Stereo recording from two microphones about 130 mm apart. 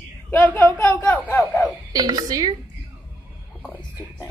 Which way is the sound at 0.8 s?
10° left (ahead or behind).